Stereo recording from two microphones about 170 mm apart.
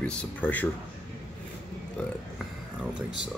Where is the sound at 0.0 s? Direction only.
5° left (ahead or behind).